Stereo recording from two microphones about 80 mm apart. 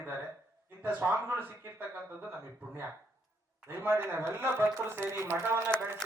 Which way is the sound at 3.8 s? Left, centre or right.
Right.